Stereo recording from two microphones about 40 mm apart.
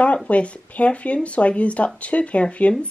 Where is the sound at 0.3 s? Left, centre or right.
Left.